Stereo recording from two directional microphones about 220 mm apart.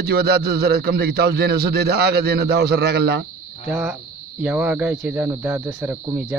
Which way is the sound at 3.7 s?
5° right (ahead or behind).